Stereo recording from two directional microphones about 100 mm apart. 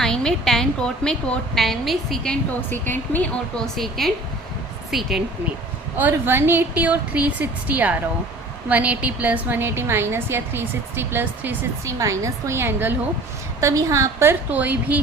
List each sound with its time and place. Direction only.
0.0 s a woman's voice: 5° left (ahead or behind)
2.6 s speech: 20° left (ahead or behind)
3.8 s a woman's voice: centre (ahead or behind)
6.0 s a woman's voice: 20° right (ahead or behind)
11.9 s a woman's voice: 30° right (ahead or behind)